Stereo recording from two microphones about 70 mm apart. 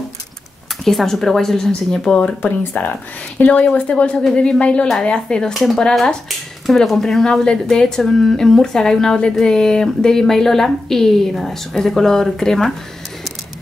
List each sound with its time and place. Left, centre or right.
0.8 s a woman's voice: centre
2.4 s a woman's voice: left; by 12.7 s centre